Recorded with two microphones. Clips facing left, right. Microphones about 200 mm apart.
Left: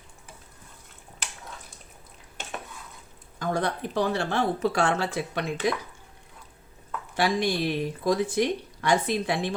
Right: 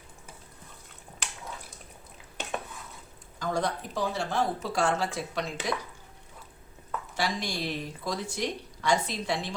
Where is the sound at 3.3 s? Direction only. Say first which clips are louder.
Left 2 dB; 60° left (ahead or behind).